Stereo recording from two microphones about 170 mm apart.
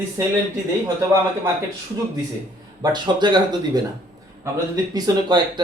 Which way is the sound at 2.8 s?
25° right (ahead or behind).